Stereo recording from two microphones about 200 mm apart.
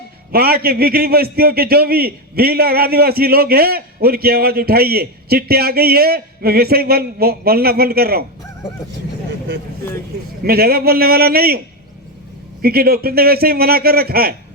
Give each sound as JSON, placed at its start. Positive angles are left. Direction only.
{"t": 0.3, "sound": "a man's voice", "side_deg": -50}
{"t": 10.4, "sound": "a man's voice", "side_deg": -50}
{"t": 12.6, "sound": "a man's voice", "side_deg": -50}